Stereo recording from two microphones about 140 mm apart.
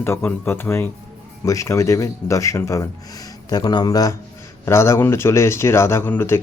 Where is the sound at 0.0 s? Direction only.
15° left (ahead or behind).